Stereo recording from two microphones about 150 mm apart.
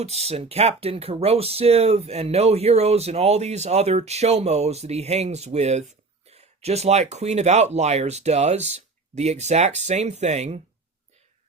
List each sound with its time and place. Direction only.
0.0 s speech: 45° right (ahead or behind)